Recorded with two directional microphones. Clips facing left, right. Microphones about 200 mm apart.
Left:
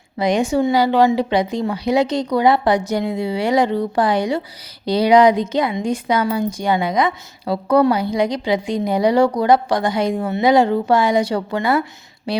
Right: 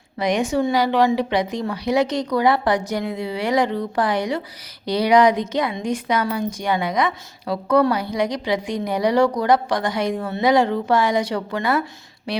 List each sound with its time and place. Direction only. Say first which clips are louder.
0.2 s a woman's voice: left 3 dB; 30° left (ahead or behind)